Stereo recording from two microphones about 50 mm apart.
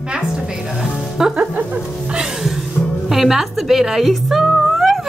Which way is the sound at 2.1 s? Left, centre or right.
Centre.